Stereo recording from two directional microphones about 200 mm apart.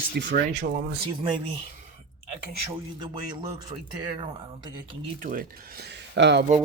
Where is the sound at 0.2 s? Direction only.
60° right (ahead or behind).